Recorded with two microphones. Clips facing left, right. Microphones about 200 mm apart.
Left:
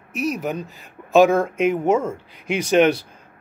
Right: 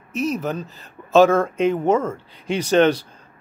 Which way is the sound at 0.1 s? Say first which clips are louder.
Right 1 dB; 10° left (ahead or behind).